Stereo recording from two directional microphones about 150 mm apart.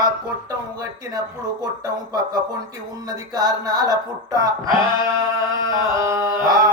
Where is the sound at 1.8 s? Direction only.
25° right (ahead or behind).